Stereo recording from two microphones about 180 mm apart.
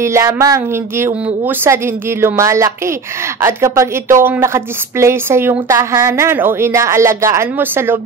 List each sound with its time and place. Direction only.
0.0 s a woman's voice: 15° right (ahead or behind)